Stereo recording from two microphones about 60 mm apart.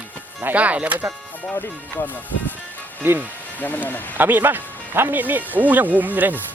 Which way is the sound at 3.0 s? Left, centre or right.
Right.